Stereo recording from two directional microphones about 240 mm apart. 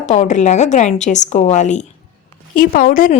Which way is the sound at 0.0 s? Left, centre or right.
Left.